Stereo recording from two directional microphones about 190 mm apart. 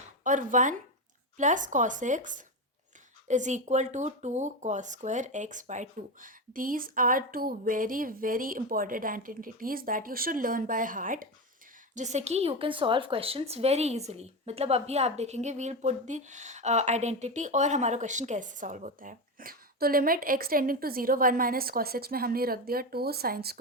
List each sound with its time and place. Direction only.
0.3 s a woman's voice: 40° right (ahead or behind)